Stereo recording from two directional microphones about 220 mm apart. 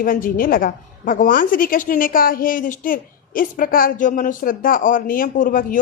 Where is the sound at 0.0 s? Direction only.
40° left (ahead or behind).